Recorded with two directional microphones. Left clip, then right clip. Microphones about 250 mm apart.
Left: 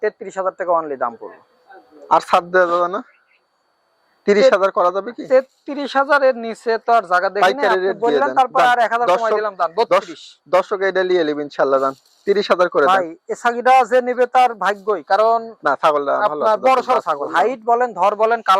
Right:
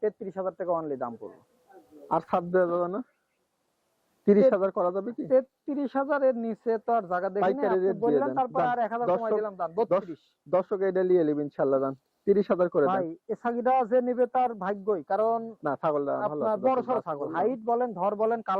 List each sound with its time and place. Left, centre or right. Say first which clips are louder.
0.0 s a man's voice: left 9 dB; centre
4.3 s a man's voice: left 9 dB; centre
15.3 s a man's voice: left 11 dB; left
15.6 s a man's voice: left 12 dB; centre